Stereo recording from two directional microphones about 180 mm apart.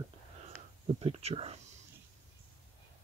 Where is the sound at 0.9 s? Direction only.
30° right (ahead or behind).